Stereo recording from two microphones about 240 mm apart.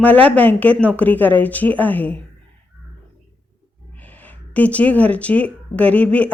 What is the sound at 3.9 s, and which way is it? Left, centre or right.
Speech, centre.